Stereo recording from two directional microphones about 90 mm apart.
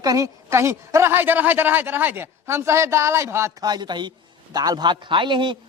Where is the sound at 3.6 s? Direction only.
50° right (ahead or behind).